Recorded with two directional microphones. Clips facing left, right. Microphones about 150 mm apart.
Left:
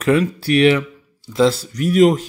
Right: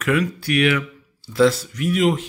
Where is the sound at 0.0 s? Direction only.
30° left (ahead or behind).